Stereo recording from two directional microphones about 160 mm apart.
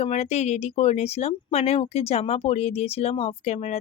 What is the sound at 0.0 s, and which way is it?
Speech, 40° left (ahead or behind).